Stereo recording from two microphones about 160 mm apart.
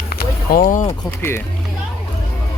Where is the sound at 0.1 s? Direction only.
65° left (ahead or behind).